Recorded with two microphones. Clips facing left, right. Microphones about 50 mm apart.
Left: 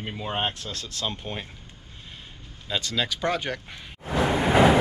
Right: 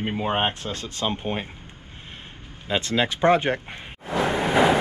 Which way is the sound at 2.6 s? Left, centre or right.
Right.